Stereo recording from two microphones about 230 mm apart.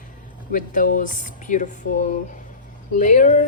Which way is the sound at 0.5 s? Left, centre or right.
Left.